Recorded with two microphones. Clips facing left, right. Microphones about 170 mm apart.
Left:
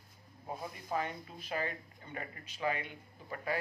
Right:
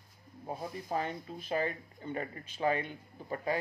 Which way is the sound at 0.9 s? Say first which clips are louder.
Right 1 dB; 35° right (ahead or behind).